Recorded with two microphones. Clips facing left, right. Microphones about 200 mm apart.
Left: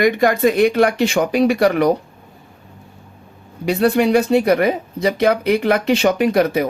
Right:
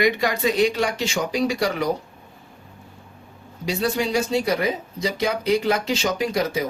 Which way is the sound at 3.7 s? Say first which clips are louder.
Left 8 dB; 60° left (ahead or behind).